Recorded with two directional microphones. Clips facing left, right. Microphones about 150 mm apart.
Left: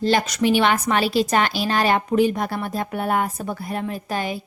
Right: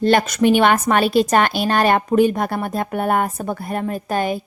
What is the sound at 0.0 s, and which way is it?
A woman's voice, 60° right (ahead or behind).